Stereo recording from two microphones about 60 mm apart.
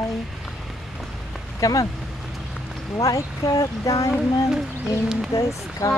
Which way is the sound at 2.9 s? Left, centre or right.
Left.